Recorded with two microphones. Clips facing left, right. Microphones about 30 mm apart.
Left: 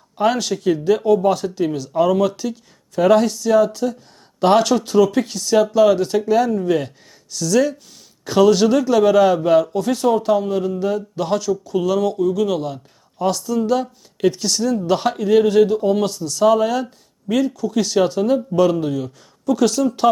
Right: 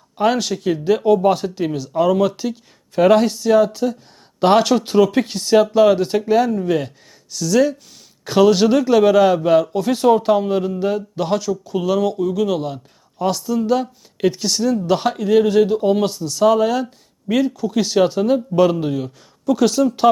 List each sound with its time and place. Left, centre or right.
0.2 s speech: centre
2.3 s speech: centre
6.5 s speech: centre
9.9 s speech: right
11.2 s speech: centre